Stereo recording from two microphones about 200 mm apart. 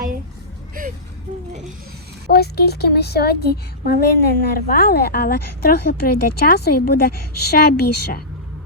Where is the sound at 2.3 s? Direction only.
50° left (ahead or behind).